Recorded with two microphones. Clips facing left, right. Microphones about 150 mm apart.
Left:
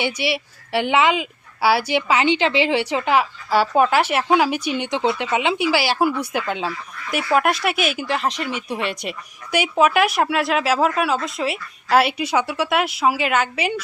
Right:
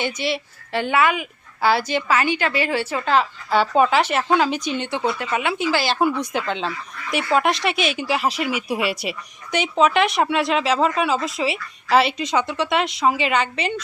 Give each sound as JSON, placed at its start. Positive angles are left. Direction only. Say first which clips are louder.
{"t": 0.0, "sound": "a woman's voice", "louder": "left 1 dB", "side_deg": 10}
{"t": 9.5, "sound": "a woman's voice", "louder": "left 1 dB", "side_deg": 10}